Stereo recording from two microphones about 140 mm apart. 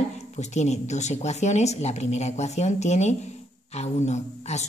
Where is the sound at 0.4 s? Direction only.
55° left (ahead or behind).